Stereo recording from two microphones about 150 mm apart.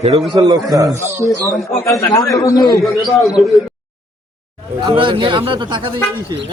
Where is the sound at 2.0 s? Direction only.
25° left (ahead or behind).